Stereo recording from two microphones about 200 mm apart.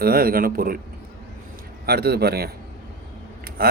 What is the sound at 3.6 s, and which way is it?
Speech, 50° right (ahead or behind).